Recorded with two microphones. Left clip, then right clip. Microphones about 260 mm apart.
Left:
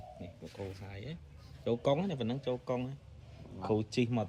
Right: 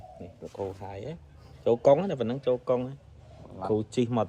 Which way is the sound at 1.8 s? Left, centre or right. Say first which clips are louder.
Right 11 dB; centre.